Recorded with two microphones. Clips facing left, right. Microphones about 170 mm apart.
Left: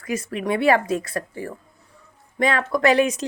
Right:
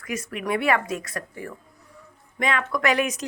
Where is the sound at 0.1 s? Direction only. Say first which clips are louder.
Left 3 dB; 30° left (ahead or behind).